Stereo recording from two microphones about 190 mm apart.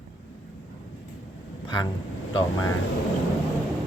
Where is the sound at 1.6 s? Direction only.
25° left (ahead or behind).